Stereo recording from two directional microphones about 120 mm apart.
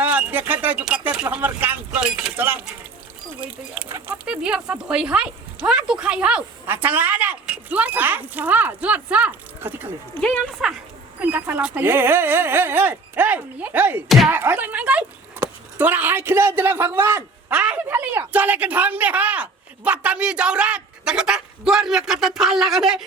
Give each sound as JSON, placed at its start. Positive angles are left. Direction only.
{"t": 0.0, "sound": "a man's voice", "side_deg": -10}
{"t": 4.3, "sound": "speech", "side_deg": -10}
{"t": 10.2, "sound": "speech", "side_deg": 10}
{"t": 11.2, "sound": "a man's voice", "side_deg": -15}
{"t": 17.5, "sound": "speech", "side_deg": -10}